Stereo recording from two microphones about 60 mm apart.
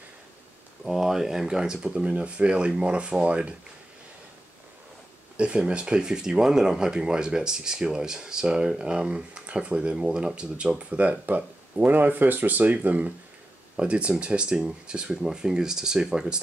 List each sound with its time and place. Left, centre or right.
0.8 s speech: centre
5.4 s speech: centre